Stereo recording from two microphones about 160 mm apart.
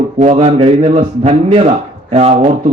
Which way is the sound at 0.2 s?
45° right (ahead or behind).